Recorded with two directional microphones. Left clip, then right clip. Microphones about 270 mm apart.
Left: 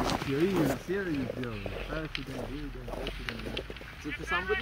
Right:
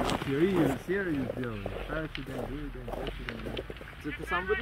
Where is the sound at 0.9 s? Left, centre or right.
Right.